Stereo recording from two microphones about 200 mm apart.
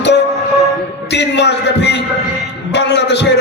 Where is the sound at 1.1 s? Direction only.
60° left (ahead or behind).